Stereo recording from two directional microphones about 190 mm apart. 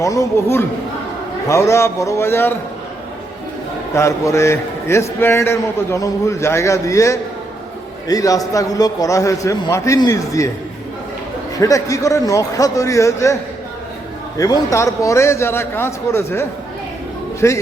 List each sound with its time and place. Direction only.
0.0 s a man's voice: 15° left (ahead or behind)
3.9 s a man's voice: 15° left (ahead or behind)
11.5 s a man's voice: 15° left (ahead or behind)
14.3 s a man's voice: 20° left (ahead or behind)